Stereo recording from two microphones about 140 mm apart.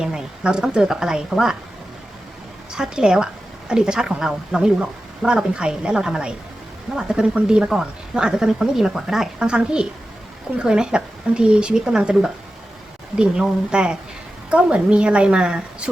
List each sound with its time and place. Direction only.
0.0 s a woman's voice: 5° right (ahead or behind)
2.7 s a woman's voice: 5° right (ahead or behind)